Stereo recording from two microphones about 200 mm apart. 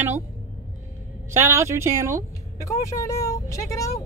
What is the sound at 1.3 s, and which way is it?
Speech, 15° right (ahead or behind).